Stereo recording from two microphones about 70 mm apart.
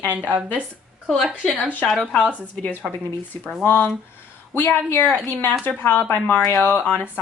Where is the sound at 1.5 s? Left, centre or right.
Left.